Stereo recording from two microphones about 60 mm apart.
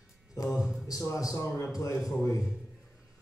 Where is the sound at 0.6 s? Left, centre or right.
Centre.